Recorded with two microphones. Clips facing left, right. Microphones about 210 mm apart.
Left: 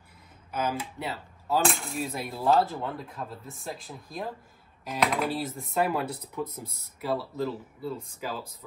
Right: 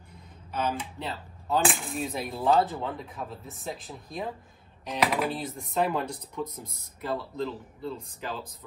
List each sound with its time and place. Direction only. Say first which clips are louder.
0.5 s speech: even; 10° left (ahead or behind)